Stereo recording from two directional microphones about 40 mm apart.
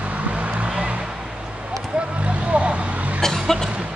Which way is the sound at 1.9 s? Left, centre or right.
Right.